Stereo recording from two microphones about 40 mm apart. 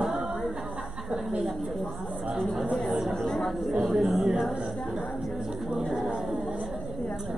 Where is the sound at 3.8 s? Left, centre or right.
Centre.